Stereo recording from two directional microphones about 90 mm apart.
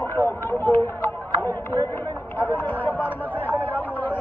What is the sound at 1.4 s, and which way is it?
Speech, 20° left (ahead or behind).